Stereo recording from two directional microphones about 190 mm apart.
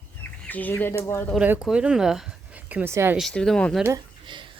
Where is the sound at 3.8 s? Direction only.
20° right (ahead or behind).